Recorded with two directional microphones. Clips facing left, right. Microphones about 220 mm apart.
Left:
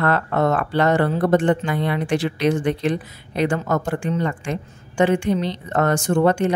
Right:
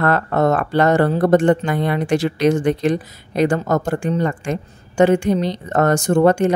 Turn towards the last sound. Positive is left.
turn(degrees=-45)  # may be behind; listen again after turning